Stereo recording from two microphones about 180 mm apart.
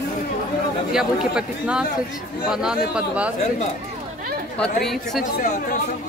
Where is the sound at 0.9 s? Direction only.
5° right (ahead or behind).